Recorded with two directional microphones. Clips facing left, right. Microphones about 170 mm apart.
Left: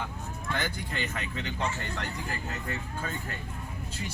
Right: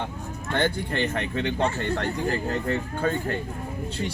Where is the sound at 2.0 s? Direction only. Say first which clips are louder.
Right 10 dB; 35° right (ahead or behind).